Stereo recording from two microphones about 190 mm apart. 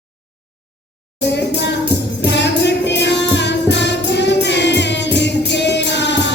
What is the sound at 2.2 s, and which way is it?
Music, 65° left (ahead or behind).